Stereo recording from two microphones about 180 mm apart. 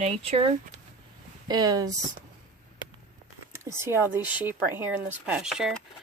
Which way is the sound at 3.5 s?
15° right (ahead or behind).